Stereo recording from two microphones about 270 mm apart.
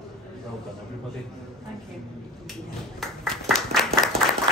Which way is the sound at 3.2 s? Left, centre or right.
Centre.